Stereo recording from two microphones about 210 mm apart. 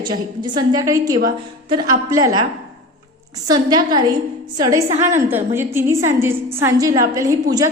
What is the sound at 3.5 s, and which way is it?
A woman's voice, 20° right (ahead or behind).